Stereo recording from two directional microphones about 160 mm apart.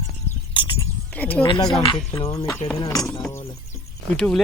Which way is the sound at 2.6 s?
45° left (ahead or behind).